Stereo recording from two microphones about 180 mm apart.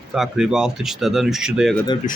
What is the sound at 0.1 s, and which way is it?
Speech, 5° right (ahead or behind).